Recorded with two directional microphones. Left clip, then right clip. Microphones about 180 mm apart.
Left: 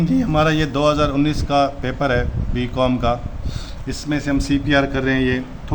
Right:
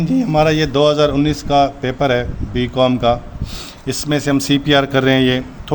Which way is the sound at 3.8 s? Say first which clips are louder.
Right 5 dB; 55° right (ahead or behind).